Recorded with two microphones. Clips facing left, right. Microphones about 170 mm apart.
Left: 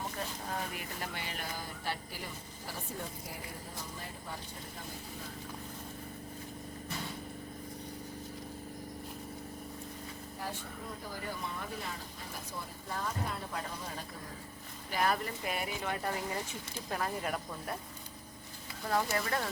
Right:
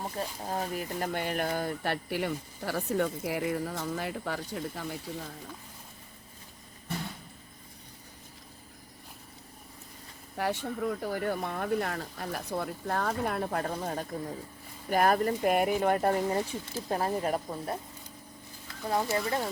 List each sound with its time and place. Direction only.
0.4 s speech: 35° right (ahead or behind); by 4.9 s 85° right
10.3 s speech: 75° right (ahead or behind); by 17.7 s 30° right (ahead or behind)
18.9 s speech: 20° right (ahead or behind)